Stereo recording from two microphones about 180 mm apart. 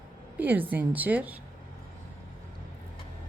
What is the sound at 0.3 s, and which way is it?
A woman's voice, 10° right (ahead or behind).